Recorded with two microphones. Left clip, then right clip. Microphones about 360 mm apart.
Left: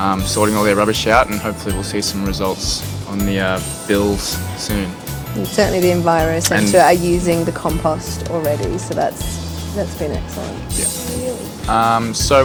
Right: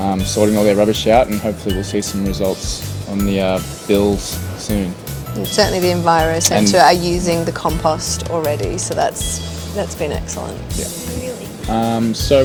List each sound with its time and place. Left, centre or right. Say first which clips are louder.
0.0 s speech: even; left
5.5 s speech: even; right
6.4 s speech: right 1 dB; left
6.7 s speech: even; right
11.7 s speech: left 4 dB; left